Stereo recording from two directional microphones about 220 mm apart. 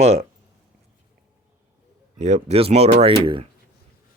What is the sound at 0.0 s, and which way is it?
Speech, 30° right (ahead or behind).